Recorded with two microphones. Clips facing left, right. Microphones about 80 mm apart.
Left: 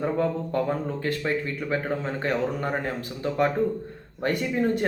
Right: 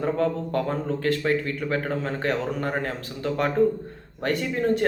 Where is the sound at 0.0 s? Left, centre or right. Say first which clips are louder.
Right 1 dB; centre.